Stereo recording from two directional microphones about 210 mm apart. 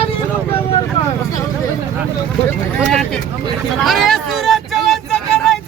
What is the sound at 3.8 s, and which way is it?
Vehicle, centre (ahead or behind).